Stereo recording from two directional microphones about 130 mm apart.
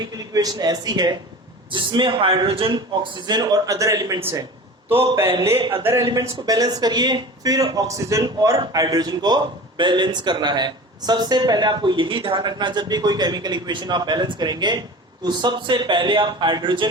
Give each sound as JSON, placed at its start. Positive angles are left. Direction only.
{"t": 0.0, "sound": "a man's voice", "side_deg": -30}
{"t": 5.5, "sound": "a man's voice", "side_deg": -40}
{"t": 5.8, "sound": "a man's voice", "side_deg": -20}